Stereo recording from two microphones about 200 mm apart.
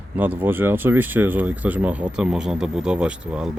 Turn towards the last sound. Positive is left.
turn(degrees=-5)  # may be behind; listen again after turning